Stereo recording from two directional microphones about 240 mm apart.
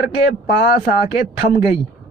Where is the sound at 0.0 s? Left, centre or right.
Left.